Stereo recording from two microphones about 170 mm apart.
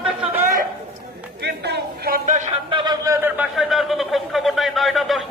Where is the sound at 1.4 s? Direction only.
75° right (ahead or behind).